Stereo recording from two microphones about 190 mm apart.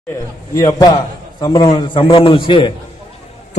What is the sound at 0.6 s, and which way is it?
A man's voice, 20° left (ahead or behind).